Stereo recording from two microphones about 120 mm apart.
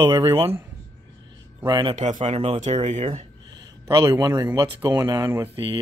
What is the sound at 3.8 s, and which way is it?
Speech, 25° right (ahead or behind).